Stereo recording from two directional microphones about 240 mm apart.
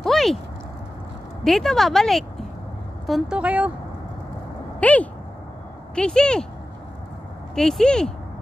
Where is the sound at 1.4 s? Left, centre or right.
Centre.